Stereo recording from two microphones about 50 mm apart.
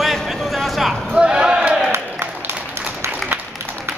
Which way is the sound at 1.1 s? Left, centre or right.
Centre.